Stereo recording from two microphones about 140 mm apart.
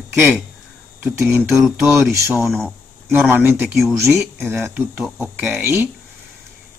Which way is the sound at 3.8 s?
Centre (ahead or behind).